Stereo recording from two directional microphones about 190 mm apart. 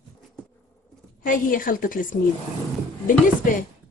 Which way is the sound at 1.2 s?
45° left (ahead or behind).